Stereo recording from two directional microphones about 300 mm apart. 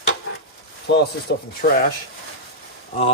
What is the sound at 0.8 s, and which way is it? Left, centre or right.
Speech, left.